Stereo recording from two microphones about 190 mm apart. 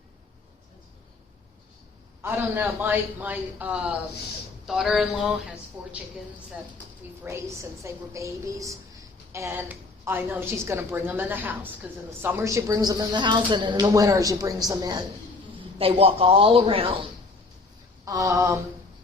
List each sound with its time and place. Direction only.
2.2 s a woman's voice: 10° right (ahead or behind)
7.3 s a woman's voice: 15° right (ahead or behind)
15.8 s speech: 30° right (ahead or behind)
18.0 s a woman's voice: 15° right (ahead or behind)